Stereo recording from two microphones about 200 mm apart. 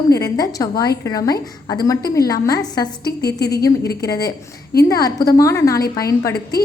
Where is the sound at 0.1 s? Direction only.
15° left (ahead or behind).